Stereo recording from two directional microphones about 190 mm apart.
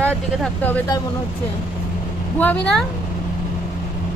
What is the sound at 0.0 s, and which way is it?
Speech, 10° left (ahead or behind).